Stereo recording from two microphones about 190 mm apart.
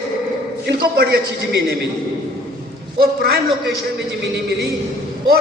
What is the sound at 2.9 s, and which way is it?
Speech, 55° right (ahead or behind).